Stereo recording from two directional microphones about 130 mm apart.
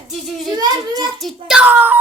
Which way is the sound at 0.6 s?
30° right (ahead or behind).